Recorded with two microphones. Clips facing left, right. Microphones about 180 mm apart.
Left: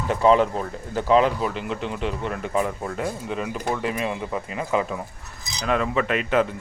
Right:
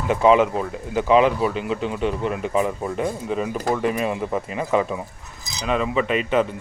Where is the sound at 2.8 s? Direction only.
20° right (ahead or behind).